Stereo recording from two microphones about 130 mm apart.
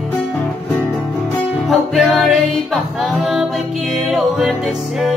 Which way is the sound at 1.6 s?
Centre (ahead or behind).